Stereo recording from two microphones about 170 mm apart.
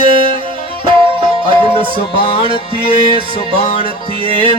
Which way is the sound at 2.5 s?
30° right (ahead or behind).